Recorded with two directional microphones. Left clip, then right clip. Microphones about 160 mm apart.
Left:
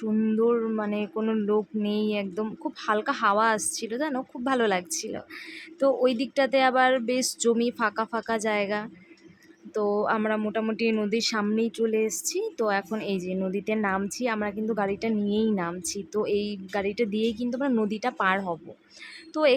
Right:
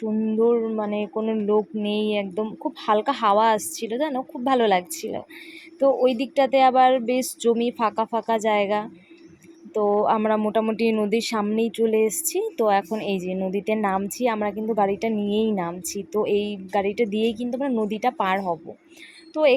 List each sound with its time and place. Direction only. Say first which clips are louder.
0.0 s speech: right 3 dB; centre (ahead or behind)
3.6 s a woman's voice: even; 30° left (ahead or behind)
3.8 s speech: right 5 dB; centre (ahead or behind)
10.2 s speech: right 6 dB; 15° right (ahead or behind)